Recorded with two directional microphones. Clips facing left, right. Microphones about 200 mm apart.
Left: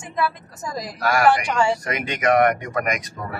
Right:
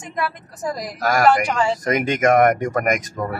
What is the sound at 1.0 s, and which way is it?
Speech, 40° right (ahead or behind).